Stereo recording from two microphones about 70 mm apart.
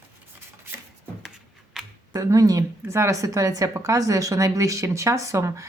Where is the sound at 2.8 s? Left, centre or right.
Right.